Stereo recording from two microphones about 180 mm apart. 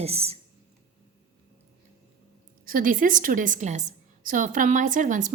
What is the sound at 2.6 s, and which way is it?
A woman's voice, 50° right (ahead or behind).